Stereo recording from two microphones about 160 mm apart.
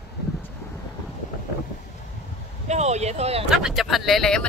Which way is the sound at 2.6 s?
45° right (ahead or behind).